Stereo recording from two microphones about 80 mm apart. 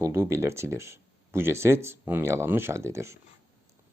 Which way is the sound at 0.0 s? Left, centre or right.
Right.